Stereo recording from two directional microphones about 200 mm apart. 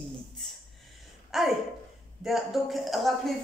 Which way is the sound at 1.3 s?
Centre (ahead or behind).